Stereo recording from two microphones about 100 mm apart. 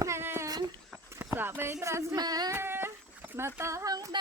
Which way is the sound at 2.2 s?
40° right (ahead or behind).